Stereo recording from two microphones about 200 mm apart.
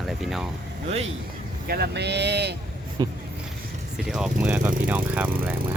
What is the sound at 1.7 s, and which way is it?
Speech, 55° right (ahead or behind).